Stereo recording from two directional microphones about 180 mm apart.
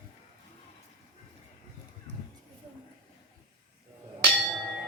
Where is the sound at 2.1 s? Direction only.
75° right (ahead or behind).